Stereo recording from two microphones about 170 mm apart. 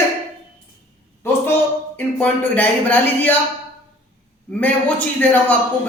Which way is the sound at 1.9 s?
10° left (ahead or behind).